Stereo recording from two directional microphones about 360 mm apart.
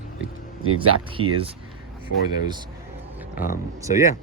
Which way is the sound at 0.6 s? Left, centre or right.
Right.